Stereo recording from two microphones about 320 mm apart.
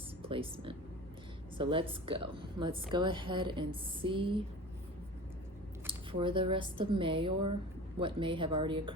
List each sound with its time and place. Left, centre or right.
0.2 s a woman's voice: centre
5.8 s a sound: centre
6.7 s a woman's voice: centre